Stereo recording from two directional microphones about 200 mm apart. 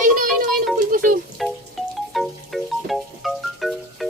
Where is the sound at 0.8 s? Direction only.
45° right (ahead or behind).